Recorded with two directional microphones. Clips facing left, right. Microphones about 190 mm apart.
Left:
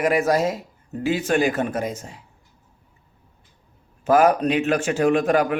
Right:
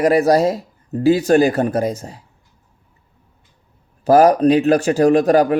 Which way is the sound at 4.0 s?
35° right (ahead or behind).